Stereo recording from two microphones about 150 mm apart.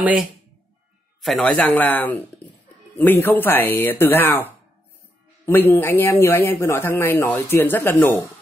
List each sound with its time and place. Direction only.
1.2 s speech: 5° left (ahead or behind)